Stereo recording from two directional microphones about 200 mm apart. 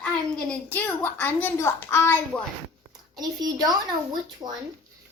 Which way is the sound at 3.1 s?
20° right (ahead or behind).